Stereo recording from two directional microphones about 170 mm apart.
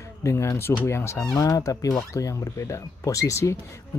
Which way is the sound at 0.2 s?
15° left (ahead or behind).